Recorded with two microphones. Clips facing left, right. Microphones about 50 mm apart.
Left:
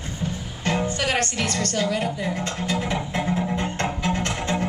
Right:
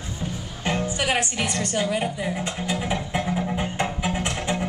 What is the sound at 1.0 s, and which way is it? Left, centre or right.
A woman's voice, centre.